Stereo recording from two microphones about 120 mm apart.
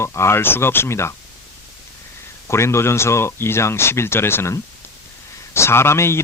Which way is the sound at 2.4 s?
20° left (ahead or behind).